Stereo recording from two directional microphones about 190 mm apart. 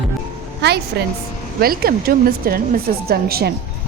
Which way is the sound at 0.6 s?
65° right (ahead or behind).